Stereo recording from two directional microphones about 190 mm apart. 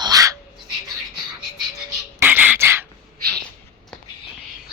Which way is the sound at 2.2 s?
10° right (ahead or behind).